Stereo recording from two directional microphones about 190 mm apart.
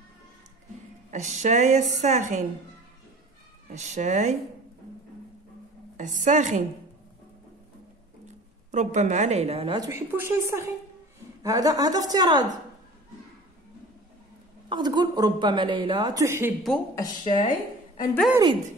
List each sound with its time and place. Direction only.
1.1 s a woman's voice: 35° right (ahead or behind)
3.7 s a woman's voice: 35° right (ahead or behind)
5.9 s a woman's voice: 40° right (ahead or behind)
8.7 s a woman's voice: 40° right (ahead or behind)
9.8 s a woman's voice: 15° right (ahead or behind)
14.7 s a woman's voice: 20° right (ahead or behind)
16.9 s speech: 20° left (ahead or behind)
17.4 s a woman's voice: 45° left (ahead or behind)